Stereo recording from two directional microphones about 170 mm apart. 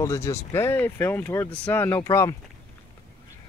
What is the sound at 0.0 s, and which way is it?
Speech, 15° left (ahead or behind).